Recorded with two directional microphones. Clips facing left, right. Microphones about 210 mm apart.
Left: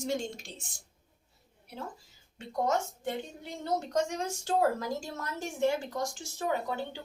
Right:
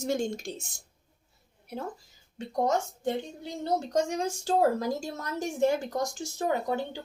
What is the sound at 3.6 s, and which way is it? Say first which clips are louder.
A woman's voice: right 3 dB; 35° right (ahead or behind).